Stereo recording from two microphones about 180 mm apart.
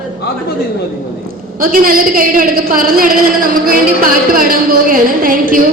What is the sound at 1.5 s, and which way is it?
A woman's voice, 50° right (ahead or behind).